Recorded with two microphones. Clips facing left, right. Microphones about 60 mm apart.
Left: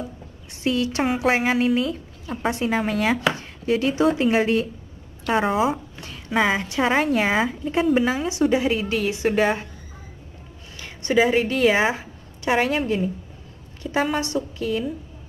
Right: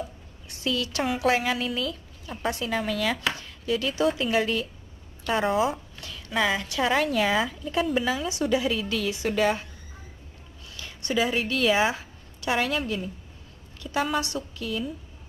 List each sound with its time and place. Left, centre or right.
0.5 s a woman's voice: left
10.8 s a woman's voice: left